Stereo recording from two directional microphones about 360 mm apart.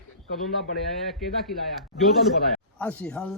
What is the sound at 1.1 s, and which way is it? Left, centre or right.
Speech, centre.